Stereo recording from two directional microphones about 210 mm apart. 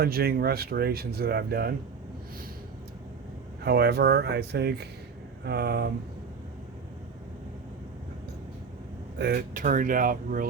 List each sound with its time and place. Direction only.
0.0 s speech: 50° right (ahead or behind)
3.6 s speech: 50° right (ahead or behind)
9.1 s speech: 50° right (ahead or behind)